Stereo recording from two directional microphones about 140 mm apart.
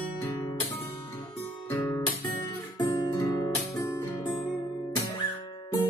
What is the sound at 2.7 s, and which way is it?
Music, 30° left (ahead or behind).